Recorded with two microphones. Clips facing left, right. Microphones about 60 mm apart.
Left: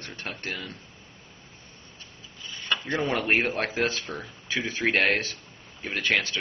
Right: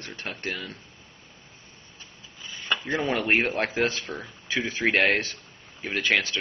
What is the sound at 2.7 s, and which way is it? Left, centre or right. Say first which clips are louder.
Speech: right 1 dB; centre.